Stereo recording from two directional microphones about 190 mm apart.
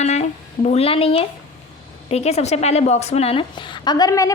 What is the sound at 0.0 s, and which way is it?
A woman's voice, 35° left (ahead or behind).